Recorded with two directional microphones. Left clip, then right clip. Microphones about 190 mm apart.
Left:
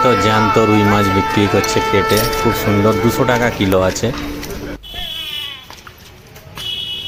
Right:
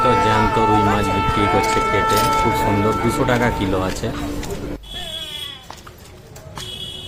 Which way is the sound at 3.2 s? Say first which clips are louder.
Left 3 dB; 30° left (ahead or behind).